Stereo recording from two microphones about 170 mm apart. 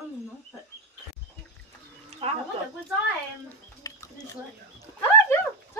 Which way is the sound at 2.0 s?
35° right (ahead or behind).